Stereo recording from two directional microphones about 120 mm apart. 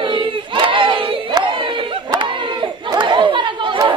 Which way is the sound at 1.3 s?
40° right (ahead or behind).